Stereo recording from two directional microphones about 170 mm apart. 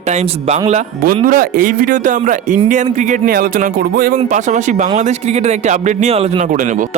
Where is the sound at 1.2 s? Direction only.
55° right (ahead or behind).